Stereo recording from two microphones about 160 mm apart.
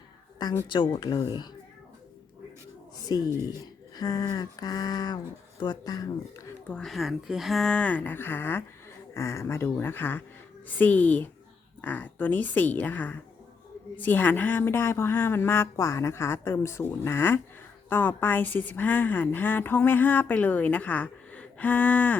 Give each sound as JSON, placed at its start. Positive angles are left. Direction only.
{"t": 0.3, "sound": "a sound", "side_deg": 25}
{"t": 0.7, "sound": "speech", "side_deg": 30}
{"t": 3.1, "sound": "speech", "side_deg": 25}
{"t": 6.7, "sound": "a woman's voice", "side_deg": 5}